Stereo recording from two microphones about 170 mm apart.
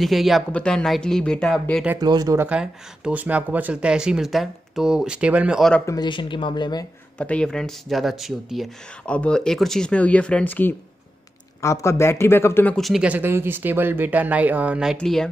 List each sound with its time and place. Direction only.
0.0 s speech: centre (ahead or behind)
2.0 s speech: 25° right (ahead or behind)
2.4 s speech: 5° right (ahead or behind)
5.9 s speech: 25° left (ahead or behind)
7.2 s a man's voice: 5° left (ahead or behind)